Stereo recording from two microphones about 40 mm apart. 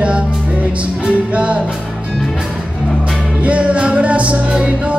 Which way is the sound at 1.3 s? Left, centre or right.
Right.